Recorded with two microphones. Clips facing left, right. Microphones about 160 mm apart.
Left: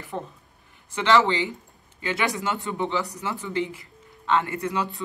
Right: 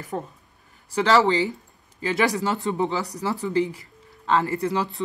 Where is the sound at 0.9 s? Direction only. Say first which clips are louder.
Right 2 dB; 35° right (ahead or behind).